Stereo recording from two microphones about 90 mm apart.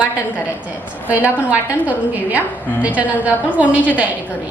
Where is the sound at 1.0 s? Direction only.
15° right (ahead or behind).